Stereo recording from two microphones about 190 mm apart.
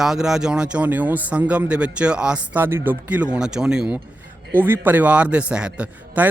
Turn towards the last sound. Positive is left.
turn(degrees=-5)  # may be behind; listen again after turning